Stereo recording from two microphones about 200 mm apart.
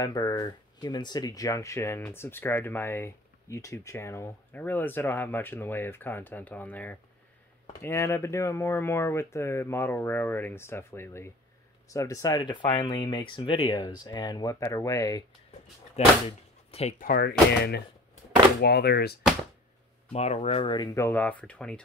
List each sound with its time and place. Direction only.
0.0 s speech: 15° left (ahead or behind)
16.0 s speech: 35° left (ahead or behind)
17.0 s speech: 50° left (ahead or behind)
20.1 s speech: 30° left (ahead or behind); by 21.8 s 5° left (ahead or behind)